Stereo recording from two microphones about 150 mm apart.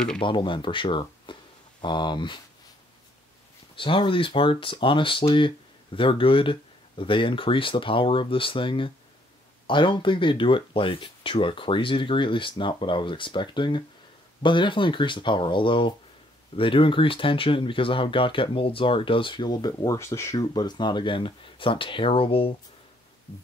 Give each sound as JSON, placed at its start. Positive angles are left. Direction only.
{"t": 0.2, "sound": "speech", "side_deg": 35}
{"t": 3.7, "sound": "speech", "side_deg": 35}